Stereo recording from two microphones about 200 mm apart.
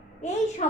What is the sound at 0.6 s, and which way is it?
Speech, 35° left (ahead or behind).